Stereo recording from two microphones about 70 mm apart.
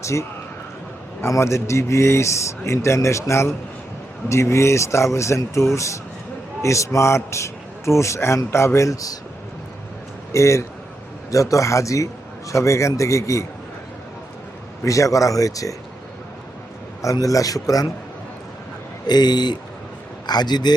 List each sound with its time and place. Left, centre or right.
0.0 s a man's voice: left
10.3 s a man's voice: left
14.8 s a man's voice: left
17.0 s a man's voice: left
19.0 s speech: left